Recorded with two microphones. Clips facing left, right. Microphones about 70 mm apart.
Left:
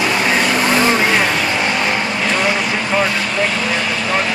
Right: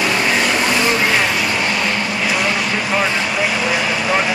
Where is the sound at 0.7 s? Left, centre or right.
Left.